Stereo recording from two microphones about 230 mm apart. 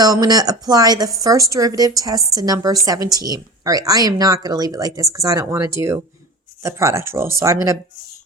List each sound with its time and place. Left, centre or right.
0.0 s speech: centre